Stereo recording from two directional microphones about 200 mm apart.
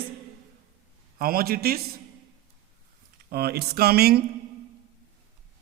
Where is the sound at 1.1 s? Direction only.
45° right (ahead or behind).